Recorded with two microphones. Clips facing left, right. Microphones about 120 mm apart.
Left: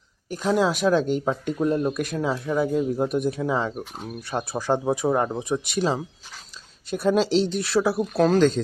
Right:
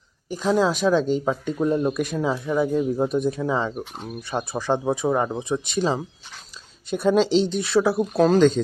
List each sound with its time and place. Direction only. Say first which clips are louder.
0.3 s speech: right 1 dB; centre (ahead or behind)